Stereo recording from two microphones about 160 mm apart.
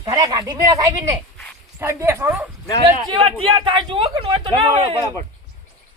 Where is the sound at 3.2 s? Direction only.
35° right (ahead or behind).